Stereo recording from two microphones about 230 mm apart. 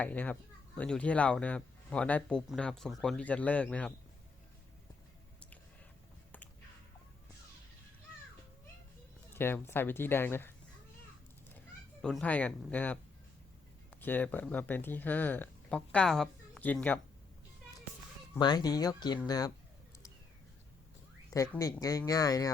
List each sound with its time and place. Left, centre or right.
0.0 s speech: centre
9.3 s speech: centre
12.0 s speech: centre
18.3 s speech: centre
21.3 s speech: centre